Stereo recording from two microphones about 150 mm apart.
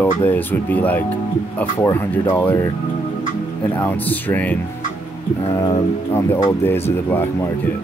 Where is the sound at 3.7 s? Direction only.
10° left (ahead or behind).